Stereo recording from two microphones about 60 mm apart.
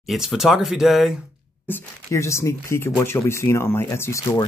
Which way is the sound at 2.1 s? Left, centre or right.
Left.